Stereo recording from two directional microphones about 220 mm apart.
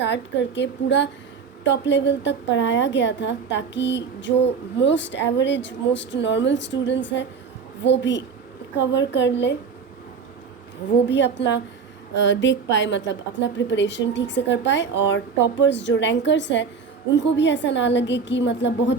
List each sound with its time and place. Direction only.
0.0 s a woman's voice: 55° left (ahead or behind)
11.1 s a woman's voice: 55° left (ahead or behind)